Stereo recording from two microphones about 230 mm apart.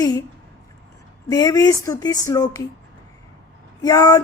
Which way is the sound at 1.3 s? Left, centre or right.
Centre.